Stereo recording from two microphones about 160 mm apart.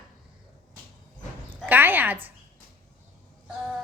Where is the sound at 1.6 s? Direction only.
10° right (ahead or behind).